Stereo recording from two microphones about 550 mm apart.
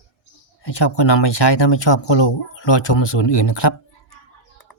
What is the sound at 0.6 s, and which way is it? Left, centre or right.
Speech, left.